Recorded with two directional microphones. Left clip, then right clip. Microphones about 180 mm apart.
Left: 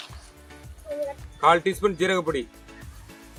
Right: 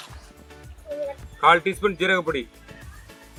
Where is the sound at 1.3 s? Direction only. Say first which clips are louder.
Right 2 dB; 10° left (ahead or behind).